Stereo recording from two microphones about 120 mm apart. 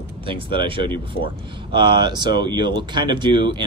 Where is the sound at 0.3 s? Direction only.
45° right (ahead or behind).